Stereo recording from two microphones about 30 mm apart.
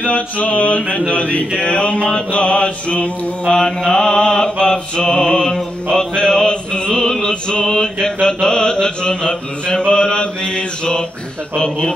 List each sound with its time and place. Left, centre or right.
0.0 s mantra: left
1.1 s a sound: left
1.6 s mantra: left
3.4 s mantra: centre
4.6 s music: left
7.4 s mantra: left